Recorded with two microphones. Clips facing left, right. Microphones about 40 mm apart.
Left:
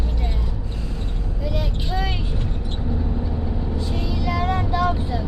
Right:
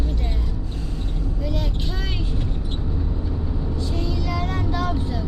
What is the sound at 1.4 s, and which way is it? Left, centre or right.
Vehicle, centre.